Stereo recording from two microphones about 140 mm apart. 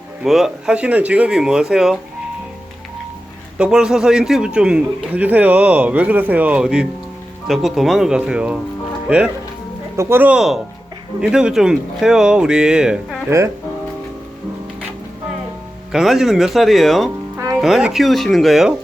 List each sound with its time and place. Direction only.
0.3 s speech: 5° right (ahead or behind)
3.6 s a man's voice: 5° right (ahead or behind)
15.9 s speech: centre (ahead or behind)
17.3 s music: 20° right (ahead or behind)
17.6 s speech: 5° right (ahead or behind)